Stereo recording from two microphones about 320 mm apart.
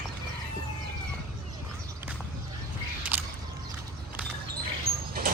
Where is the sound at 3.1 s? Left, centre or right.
Centre.